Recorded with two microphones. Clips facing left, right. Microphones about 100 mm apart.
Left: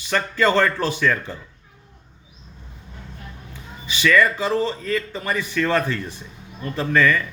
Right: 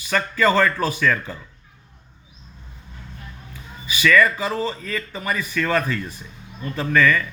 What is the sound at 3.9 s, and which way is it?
Speech, 25° left (ahead or behind).